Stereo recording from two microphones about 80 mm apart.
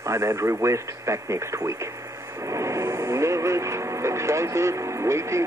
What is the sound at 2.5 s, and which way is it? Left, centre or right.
Vehicle, right.